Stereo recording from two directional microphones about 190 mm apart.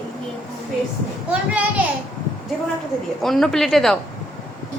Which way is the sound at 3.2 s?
Centre (ahead or behind).